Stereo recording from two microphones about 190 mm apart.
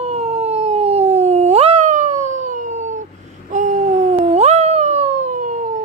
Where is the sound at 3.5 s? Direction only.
40° right (ahead or behind).